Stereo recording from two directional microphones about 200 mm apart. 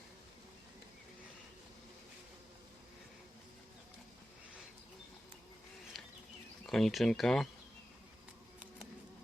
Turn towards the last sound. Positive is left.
turn(degrees=0)  # may be behind; listen again after turning